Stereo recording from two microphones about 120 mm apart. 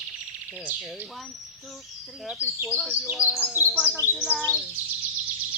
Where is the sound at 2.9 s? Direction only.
10° right (ahead or behind).